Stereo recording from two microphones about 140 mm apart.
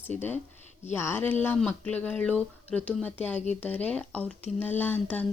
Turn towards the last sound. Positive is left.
turn(degrees=10)  # may be behind; listen again after turning